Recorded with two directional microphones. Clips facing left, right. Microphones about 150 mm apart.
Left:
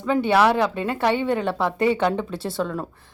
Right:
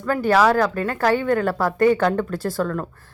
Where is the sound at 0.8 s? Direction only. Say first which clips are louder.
Right 1 dB; 25° left (ahead or behind).